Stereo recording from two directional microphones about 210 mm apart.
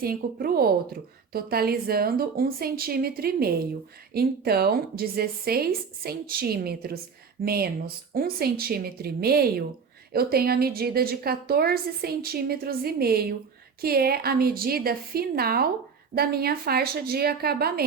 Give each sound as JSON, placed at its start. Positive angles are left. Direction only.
{"t": 0.0, "sound": "a woman's voice", "side_deg": -45}